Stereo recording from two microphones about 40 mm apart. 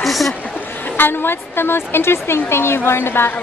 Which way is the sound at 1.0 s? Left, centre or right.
Left.